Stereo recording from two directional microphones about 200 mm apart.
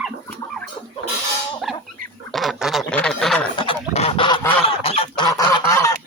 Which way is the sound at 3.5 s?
25° left (ahead or behind).